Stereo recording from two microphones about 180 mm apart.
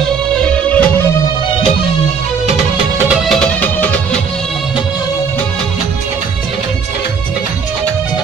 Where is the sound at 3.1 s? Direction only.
5° left (ahead or behind).